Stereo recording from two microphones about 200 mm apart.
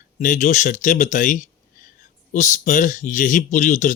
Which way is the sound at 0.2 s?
40° left (ahead or behind).